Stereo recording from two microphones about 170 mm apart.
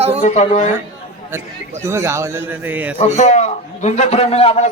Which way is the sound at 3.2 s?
45° left (ahead or behind).